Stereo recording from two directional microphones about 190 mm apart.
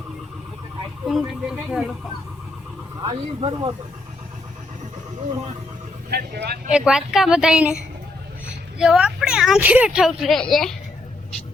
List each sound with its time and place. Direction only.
1.0 s speech: centre (ahead or behind)
3.0 s speech: 25° right (ahead or behind)
6.1 s speech: 60° right (ahead or behind)
6.7 s speech: 5° right (ahead or behind)